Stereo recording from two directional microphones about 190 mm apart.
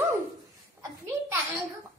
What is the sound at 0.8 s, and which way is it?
Speech, 15° right (ahead or behind).